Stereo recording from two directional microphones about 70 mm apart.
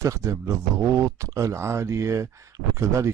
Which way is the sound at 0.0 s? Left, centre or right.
Right.